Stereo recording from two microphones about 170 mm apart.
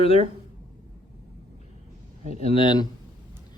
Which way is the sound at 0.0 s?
35° left (ahead or behind).